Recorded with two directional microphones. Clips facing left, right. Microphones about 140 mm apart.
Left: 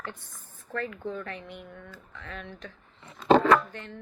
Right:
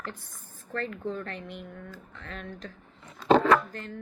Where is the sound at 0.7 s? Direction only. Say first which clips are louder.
Right 1 dB; 35° right (ahead or behind).